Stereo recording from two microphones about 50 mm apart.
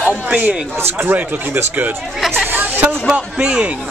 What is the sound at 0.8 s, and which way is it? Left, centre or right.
Speech, right.